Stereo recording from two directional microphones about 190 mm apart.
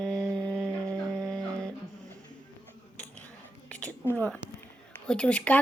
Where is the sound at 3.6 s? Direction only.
5° left (ahead or behind).